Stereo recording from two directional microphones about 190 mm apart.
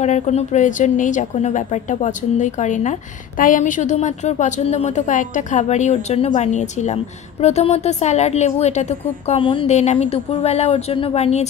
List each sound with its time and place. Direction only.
0.0 s a woman's voice: 35° left (ahead or behind)